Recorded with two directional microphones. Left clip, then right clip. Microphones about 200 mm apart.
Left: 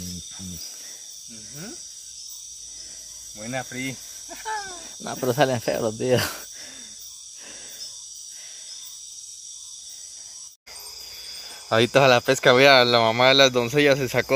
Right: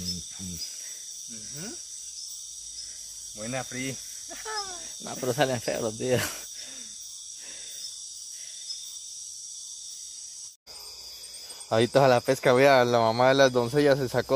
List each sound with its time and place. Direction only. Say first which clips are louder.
3.4 s cricket: left 3 dB; centre (ahead or behind)
5.0 s speech: left 5 dB; 25° left (ahead or behind)
11.7 s speech: left 4 dB; 5° right (ahead or behind)